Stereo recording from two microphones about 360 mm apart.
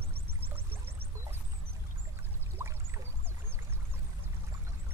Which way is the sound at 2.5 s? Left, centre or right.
Centre.